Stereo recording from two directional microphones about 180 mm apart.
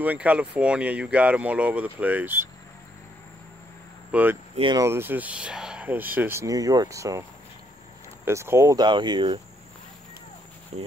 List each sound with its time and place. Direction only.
0.0 s speech: 10° right (ahead or behind)
4.1 s speech: 10° right (ahead or behind)
4.6 s speech: 25° right (ahead or behind)
4.8 s speech: 10° right (ahead or behind)
8.3 s speech: 15° right (ahead or behind)
10.7 s speech: 35° right (ahead or behind)